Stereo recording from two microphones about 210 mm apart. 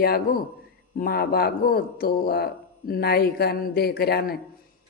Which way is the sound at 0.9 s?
45° left (ahead or behind).